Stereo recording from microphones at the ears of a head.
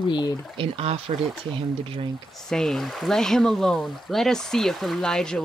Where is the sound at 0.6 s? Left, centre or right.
Right.